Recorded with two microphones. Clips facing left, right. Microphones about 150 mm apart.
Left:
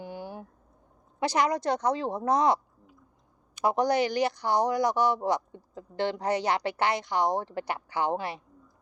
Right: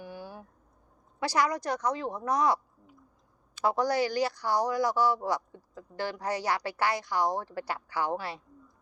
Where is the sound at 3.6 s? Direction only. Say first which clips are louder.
Left 2 dB; 20° left (ahead or behind).